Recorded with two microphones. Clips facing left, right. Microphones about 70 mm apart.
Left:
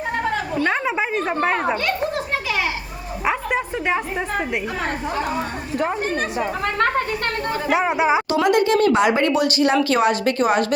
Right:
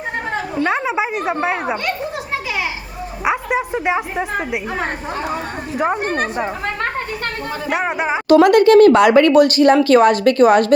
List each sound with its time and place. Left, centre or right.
0.6 s speech: centre
3.2 s a sound: centre
5.9 s speech: right
7.7 s speech: centre
8.3 s speech: right